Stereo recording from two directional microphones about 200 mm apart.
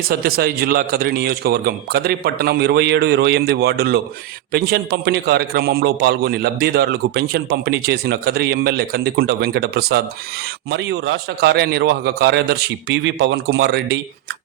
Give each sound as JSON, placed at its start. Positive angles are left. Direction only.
{"t": 0.1, "sound": "a man's voice", "side_deg": -50}